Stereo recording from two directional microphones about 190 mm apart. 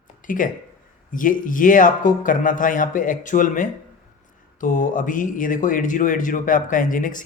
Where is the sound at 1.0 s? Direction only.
45° left (ahead or behind).